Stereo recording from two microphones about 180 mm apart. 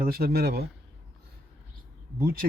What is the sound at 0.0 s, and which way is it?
Speech, 55° right (ahead or behind).